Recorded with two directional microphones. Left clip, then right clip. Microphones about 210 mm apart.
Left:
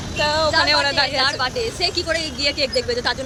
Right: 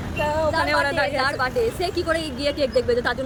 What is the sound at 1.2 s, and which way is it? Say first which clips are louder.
Speech: left 1 dB; 20° right (ahead or behind).